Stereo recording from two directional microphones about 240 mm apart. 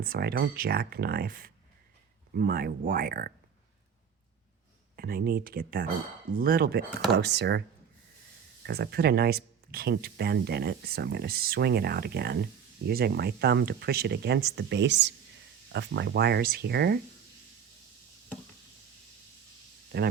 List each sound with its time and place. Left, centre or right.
0.0 s speech: right
4.9 s speech: right
8.6 s speech: right
19.9 s speech: right